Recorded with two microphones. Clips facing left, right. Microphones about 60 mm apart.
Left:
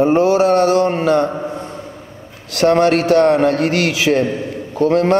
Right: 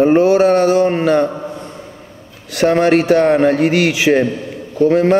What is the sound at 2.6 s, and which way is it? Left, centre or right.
Speech, centre.